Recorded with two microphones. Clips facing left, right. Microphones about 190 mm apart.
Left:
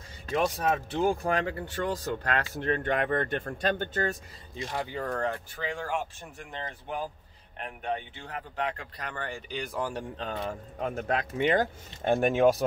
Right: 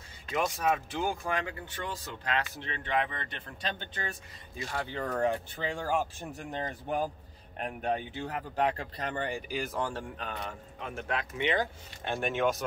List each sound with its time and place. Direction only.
0.3 s speech: 35° left (ahead or behind)
4.6 s a man's voice: 25° left (ahead or behind)
5.0 s speech: 10° right (ahead or behind)
5.6 s speech: 30° right (ahead or behind)
8.9 s speech: 25° right (ahead or behind)
9.5 s speech: 5° right (ahead or behind)
9.8 s a man's voice: 10° left (ahead or behind)
10.1 s a man's voice: 30° left (ahead or behind)
10.8 s speech: 40° left (ahead or behind)